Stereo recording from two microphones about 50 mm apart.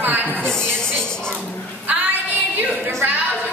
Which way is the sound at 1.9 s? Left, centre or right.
Right.